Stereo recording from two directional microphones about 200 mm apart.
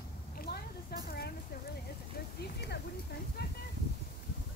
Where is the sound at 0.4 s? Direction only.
50° left (ahead or behind).